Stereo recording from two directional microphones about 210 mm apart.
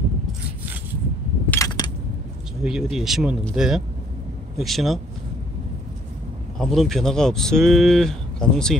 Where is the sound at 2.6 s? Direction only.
Centre (ahead or behind).